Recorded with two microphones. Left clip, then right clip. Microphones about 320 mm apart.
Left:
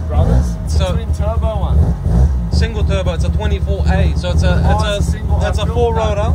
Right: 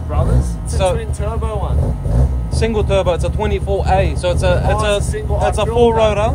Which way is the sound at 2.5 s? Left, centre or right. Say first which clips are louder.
Right 6 dB; centre.